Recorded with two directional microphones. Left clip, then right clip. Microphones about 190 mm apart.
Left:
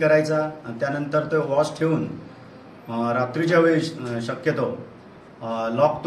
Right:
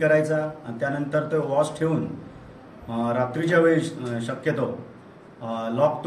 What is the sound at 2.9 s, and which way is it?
Speech, 5° right (ahead or behind).